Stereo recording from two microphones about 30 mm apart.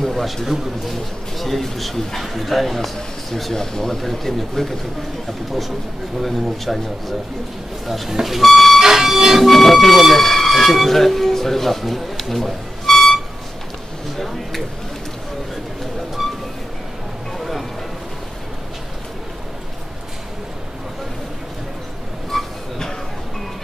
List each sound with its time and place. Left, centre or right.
0.1 s a man's voice: centre
1.4 s a man's voice: centre
3.5 s speech: centre
4.0 s speech: centre
6.2 s a man's voice: centre
8.1 s a sound: centre
8.4 s a man's voice: centre
8.7 s a sound: centre
9.5 s a man's voice: centre
16.2 s vehicle: centre
17.4 s music: centre
22.3 s a sound: centre